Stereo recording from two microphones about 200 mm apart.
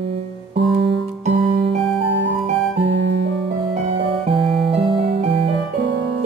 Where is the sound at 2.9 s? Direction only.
60° right (ahead or behind).